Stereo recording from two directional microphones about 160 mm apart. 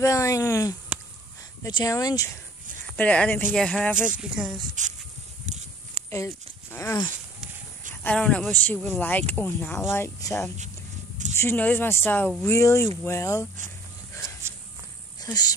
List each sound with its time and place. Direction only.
0.0 s speech: 20° left (ahead or behind)
3.0 s speech: 10° left (ahead or behind)
4.8 s speech: 50° right (ahead or behind)
5.9 s speech: 15° left (ahead or behind)
12.5 s speech: 20° left (ahead or behind)
15.1 s speech: 25° left (ahead or behind)